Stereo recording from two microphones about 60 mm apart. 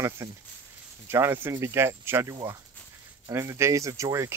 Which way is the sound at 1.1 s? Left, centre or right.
Right.